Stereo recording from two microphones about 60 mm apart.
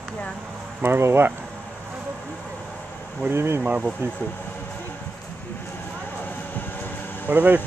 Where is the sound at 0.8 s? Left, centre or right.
Right.